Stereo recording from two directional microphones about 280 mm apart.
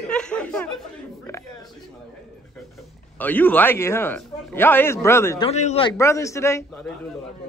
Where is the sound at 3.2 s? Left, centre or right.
Centre.